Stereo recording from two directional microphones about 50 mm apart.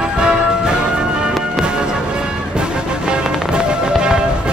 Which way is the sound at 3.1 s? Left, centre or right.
Centre.